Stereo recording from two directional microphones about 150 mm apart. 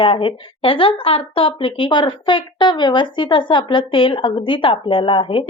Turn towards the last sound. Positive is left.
turn(degrees=35)  # may be behind; listen again after turning